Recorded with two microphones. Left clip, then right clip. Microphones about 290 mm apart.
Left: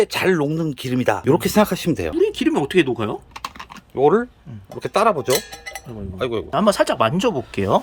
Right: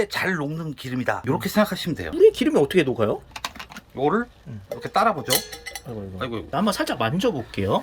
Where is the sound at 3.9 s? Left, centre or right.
Left.